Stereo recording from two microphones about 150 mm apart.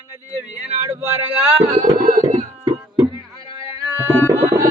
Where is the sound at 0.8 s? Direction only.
15° right (ahead or behind).